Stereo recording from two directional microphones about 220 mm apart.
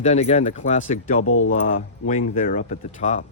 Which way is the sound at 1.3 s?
70° left (ahead or behind).